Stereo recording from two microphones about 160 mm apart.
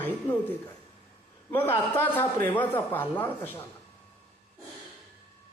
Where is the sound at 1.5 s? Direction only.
15° left (ahead or behind).